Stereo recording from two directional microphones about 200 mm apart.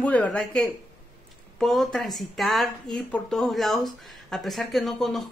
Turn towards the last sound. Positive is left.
turn(degrees=0)  # may be behind; listen again after turning